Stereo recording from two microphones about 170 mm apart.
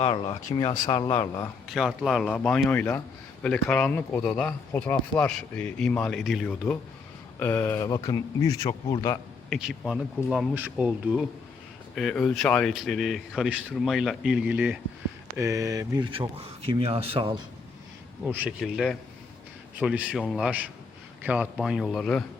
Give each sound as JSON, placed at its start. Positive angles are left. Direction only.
{"t": 0.0, "sound": "speech", "side_deg": 30}
{"t": 1.7, "sound": "speech", "side_deg": 0}
{"t": 9.5, "sound": "speech", "side_deg": 0}
{"t": 15.4, "sound": "speech", "side_deg": -20}
{"t": 18.3, "sound": "speech", "side_deg": -10}
{"t": 18.6, "sound": "speech", "side_deg": 0}